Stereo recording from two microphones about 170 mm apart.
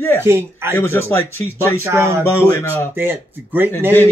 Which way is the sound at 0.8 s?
15° left (ahead or behind).